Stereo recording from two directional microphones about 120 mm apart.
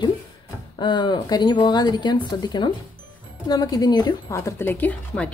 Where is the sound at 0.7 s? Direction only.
40° left (ahead or behind).